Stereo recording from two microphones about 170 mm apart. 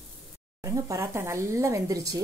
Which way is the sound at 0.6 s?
20° right (ahead or behind).